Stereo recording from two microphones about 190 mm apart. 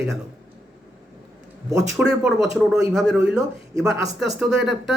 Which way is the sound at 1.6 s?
15° right (ahead or behind).